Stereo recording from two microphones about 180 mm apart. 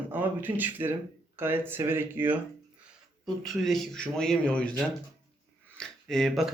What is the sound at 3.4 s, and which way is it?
Speech, centre (ahead or behind).